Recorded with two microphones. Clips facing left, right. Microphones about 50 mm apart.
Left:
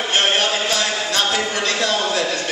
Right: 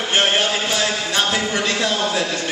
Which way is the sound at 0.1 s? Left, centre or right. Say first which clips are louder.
Right 1 dB; centre.